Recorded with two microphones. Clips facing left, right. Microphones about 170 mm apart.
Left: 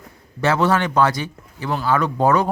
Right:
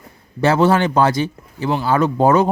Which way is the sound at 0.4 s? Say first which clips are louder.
Right 4 dB; 30° right (ahead or behind).